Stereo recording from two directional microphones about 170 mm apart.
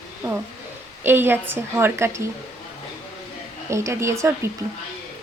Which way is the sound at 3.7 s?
15° right (ahead or behind).